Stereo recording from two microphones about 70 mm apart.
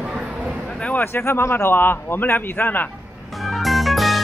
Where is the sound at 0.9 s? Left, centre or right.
Left.